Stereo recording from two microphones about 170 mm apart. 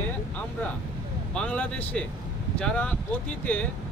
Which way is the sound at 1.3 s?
5° left (ahead or behind).